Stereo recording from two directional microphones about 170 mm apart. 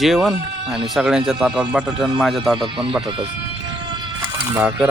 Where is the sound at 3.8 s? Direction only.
25° right (ahead or behind).